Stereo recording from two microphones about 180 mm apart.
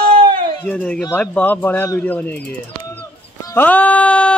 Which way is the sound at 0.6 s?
5° left (ahead or behind).